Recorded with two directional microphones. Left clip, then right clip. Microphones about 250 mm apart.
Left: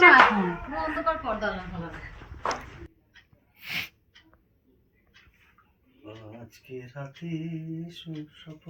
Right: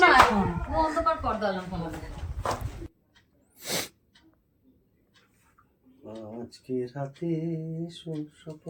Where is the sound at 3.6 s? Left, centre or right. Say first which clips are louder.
Right 1 dB; right.